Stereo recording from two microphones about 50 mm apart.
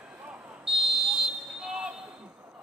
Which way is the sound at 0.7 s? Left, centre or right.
Centre.